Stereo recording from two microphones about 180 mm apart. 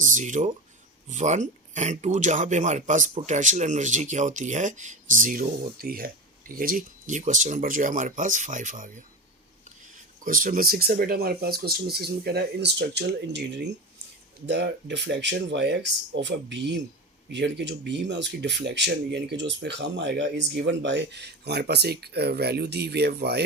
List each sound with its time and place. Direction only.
0.0 s speech: 45° right (ahead or behind)
10.2 s speech: 50° right (ahead or behind)